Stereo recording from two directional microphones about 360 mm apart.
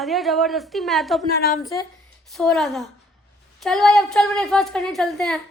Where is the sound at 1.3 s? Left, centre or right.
Left.